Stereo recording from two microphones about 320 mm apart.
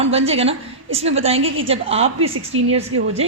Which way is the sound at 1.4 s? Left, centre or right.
Right.